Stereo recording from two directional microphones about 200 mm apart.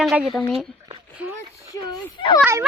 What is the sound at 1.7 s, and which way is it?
Speech, 20° left (ahead or behind).